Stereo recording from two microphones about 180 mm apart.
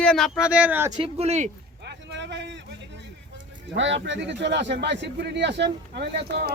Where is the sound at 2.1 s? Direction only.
75° right (ahead or behind).